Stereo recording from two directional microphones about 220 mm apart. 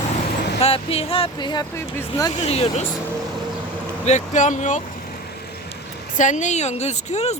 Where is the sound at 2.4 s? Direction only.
25° left (ahead or behind).